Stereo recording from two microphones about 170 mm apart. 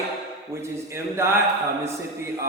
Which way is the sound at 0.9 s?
15° right (ahead or behind).